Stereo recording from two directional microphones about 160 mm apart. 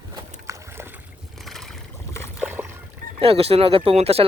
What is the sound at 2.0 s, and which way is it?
Boat, 15° left (ahead or behind).